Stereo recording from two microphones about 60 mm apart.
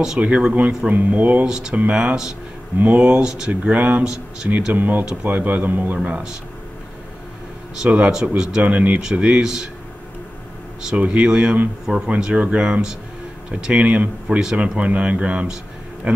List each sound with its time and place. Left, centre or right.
0.2 s speech: centre
1.4 s speech: centre
2.8 s speech: right
4.7 s speech: right
6.0 s speech: centre
7.8 s speech: centre
11.0 s speech: centre